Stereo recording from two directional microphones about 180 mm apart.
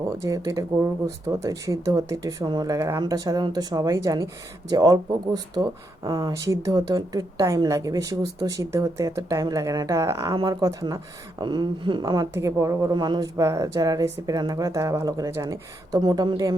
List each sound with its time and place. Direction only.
0.2 s speech: 20° right (ahead or behind)